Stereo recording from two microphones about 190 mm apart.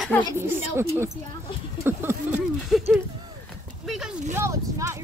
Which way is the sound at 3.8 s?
Centre (ahead or behind).